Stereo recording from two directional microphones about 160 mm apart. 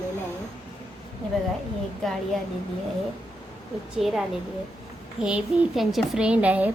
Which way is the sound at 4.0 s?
Centre (ahead or behind).